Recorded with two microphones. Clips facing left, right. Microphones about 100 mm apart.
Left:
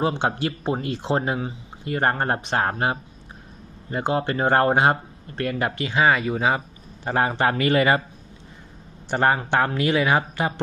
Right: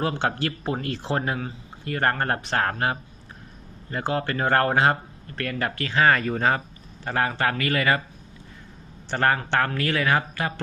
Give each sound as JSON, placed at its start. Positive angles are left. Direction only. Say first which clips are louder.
{"t": 0.0, "sound": "a man's voice", "louder": "left 2 dB", "side_deg": 20}
{"t": 7.0, "sound": "speech", "louder": "left 3 dB", "side_deg": 20}
{"t": 9.0, "sound": "a man's voice", "louder": "left 2 dB", "side_deg": 15}